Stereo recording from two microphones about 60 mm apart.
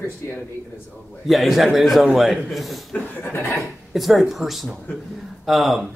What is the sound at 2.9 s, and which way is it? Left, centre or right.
Speech, left.